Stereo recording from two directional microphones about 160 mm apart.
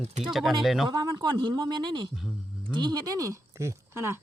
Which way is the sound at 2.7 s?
25° right (ahead or behind).